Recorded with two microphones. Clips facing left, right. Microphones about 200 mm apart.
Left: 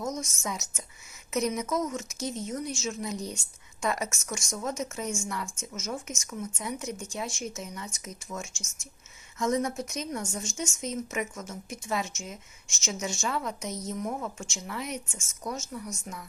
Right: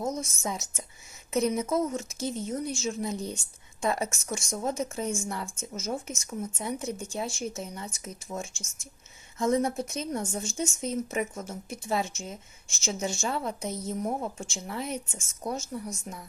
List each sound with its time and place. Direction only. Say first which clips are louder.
0.0 s a woman's voice: right 2 dB; 30° right (ahead or behind)
2.2 s speech: right 1 dB; centre (ahead or behind)
2.7 s a woman's voice: right 2 dB; 35° right (ahead or behind)
8.5 s speech: right 1 dB; 55° right (ahead or behind)
9.4 s a woman's voice: right 2 dB; 30° right (ahead or behind)